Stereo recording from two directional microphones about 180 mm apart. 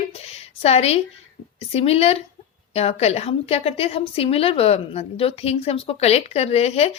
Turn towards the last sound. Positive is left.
turn(degrees=35)  # may be behind; listen again after turning